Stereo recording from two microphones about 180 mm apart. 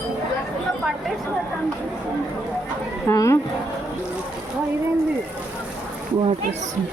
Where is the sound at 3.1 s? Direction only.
15° left (ahead or behind).